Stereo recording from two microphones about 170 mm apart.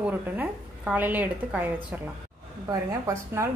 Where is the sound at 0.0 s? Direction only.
10° right (ahead or behind).